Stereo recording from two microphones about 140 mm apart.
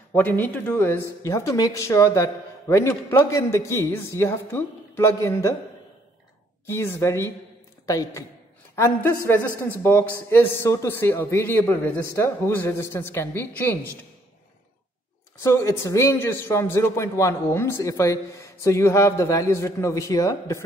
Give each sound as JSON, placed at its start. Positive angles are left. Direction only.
{"t": 0.1, "sound": "a man's voice", "side_deg": 15}
{"t": 6.6, "sound": "a man's voice", "side_deg": 20}
{"t": 15.4, "sound": "a man's voice", "side_deg": 20}